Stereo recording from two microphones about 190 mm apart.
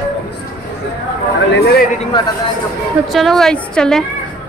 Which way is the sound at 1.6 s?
55° left (ahead or behind).